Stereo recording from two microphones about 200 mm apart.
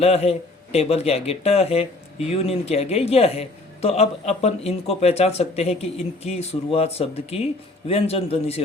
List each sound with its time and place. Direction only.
0.0 s a man's voice: 30° left (ahead or behind)